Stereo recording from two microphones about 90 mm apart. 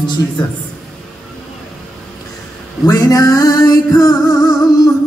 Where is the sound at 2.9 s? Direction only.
45° left (ahead or behind).